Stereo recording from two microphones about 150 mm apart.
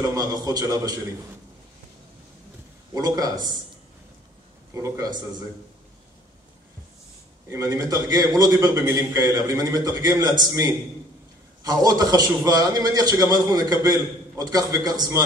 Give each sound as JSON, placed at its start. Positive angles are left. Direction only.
{"t": 0.1, "sound": "a man's voice", "side_deg": -25}
{"t": 2.9, "sound": "a man's voice", "side_deg": -25}
{"t": 4.7, "sound": "a man's voice", "side_deg": -20}
{"t": 7.4, "sound": "a man's voice", "side_deg": -20}